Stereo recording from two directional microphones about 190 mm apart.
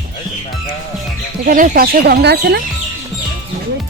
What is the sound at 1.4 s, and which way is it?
Speech, 45° right (ahead or behind).